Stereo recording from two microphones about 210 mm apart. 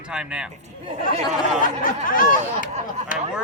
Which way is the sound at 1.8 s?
40° left (ahead or behind).